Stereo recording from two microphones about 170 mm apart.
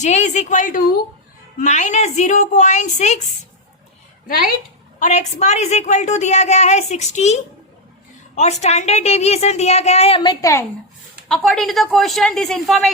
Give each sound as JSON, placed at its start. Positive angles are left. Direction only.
{"t": 0.0, "sound": "a woman's voice", "side_deg": 45}
{"t": 4.3, "sound": "speech", "side_deg": 55}
{"t": 4.9, "sound": "a woman's voice", "side_deg": 45}
{"t": 11.3, "sound": "speech", "side_deg": 0}